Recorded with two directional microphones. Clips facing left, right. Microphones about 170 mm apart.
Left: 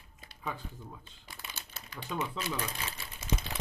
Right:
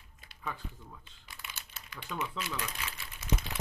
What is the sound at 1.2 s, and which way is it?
Crumpling, 35° left (ahead or behind).